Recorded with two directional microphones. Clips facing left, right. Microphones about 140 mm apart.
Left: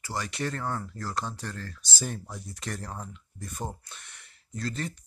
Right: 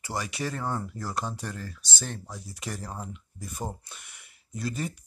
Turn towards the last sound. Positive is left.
turn(degrees=-10)  # may be behind; listen again after turning